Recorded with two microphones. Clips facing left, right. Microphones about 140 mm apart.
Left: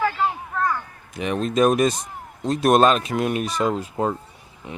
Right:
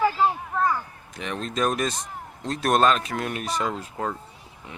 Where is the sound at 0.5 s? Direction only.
10° right (ahead or behind).